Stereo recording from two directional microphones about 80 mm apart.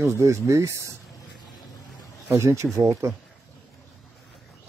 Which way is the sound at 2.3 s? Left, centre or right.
Right.